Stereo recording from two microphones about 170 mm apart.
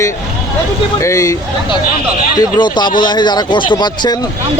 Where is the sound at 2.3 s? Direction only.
25° left (ahead or behind).